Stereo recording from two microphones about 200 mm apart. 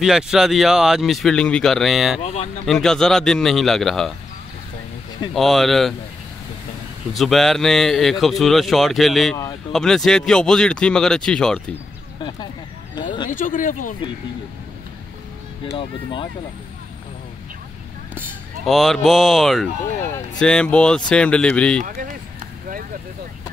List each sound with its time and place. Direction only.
0.0 s a man's voice: centre (ahead or behind)
2.2 s speech: 30° left (ahead or behind)
2.6 s a man's voice: centre (ahead or behind)
5.3 s a man's voice: centre (ahead or behind)
7.2 s a man's voice: centre (ahead or behind)
12.2 s a sound: 20° left (ahead or behind)
13.3 s speech: 40° left (ahead or behind)
15.7 s speech: 25° left (ahead or behind)
18.7 s a man's voice: centre (ahead or behind)
21.8 s speech: 45° right (ahead or behind)